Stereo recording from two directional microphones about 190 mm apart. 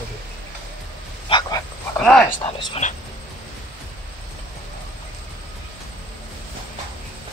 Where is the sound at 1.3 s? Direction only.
20° left (ahead or behind).